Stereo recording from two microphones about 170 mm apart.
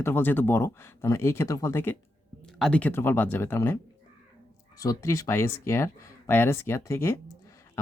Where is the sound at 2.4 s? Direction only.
5° left (ahead or behind).